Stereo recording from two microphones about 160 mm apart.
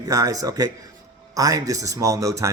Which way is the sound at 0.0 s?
20° right (ahead or behind).